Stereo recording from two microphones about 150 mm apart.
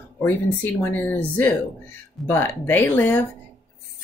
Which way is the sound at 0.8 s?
15° left (ahead or behind).